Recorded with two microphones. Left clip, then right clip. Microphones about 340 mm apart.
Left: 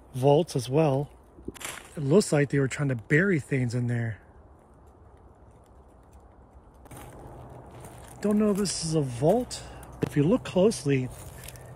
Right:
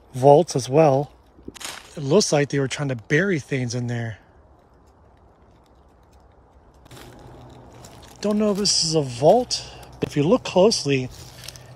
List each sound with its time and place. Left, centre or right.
0.1 s speech: centre
8.2 s speech: centre